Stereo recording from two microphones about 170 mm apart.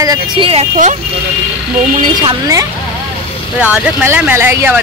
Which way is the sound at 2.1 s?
20° right (ahead or behind).